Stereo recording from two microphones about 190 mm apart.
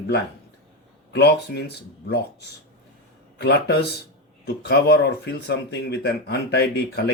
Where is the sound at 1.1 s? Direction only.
60° left (ahead or behind).